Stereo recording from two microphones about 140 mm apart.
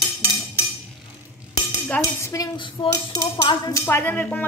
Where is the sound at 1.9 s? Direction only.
20° left (ahead or behind).